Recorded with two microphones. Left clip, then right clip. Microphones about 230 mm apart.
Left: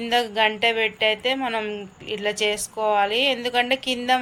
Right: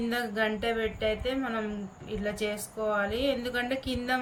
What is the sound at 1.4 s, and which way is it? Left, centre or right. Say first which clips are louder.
Speech: left 8 dB; centre.